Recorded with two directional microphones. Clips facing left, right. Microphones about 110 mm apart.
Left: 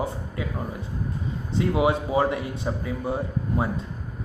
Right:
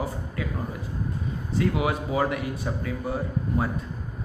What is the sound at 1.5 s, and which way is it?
A man's voice, 25° left (ahead or behind).